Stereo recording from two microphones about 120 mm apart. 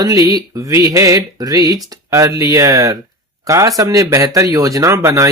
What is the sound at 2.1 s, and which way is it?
Speech, 25° right (ahead or behind).